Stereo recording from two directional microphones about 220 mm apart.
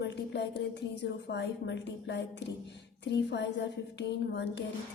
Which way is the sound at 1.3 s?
50° left (ahead or behind).